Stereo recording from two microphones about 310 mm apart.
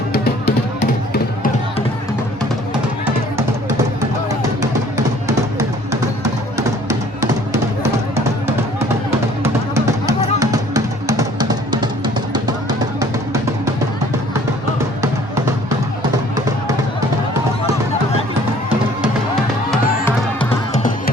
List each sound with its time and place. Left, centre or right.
0.1 s music: left
4.3 s music: centre
9.4 s music: centre
15.0 s music: centre